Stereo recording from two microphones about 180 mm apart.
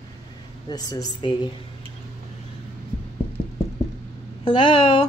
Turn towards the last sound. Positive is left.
turn(degrees=25)  # may be behind; listen again after turning